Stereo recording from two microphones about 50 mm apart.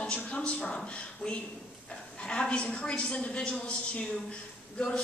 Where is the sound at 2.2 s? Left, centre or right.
Left.